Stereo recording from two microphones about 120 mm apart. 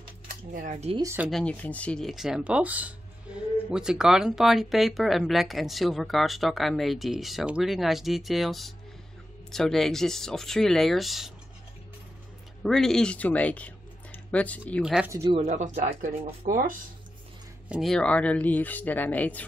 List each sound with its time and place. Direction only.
0.3 s speech: 80° right
1.0 s speech: 15° right (ahead or behind)
1.3 s speech: 10° left (ahead or behind)
12.6 s speech: 5° left (ahead or behind)
14.8 s speech: 5° right (ahead or behind)
15.0 s speech: 25° right (ahead or behind)
15.3 s speech: 80° right
17.6 s speech: 5° right (ahead or behind)
17.9 s speech: 10° left (ahead or behind)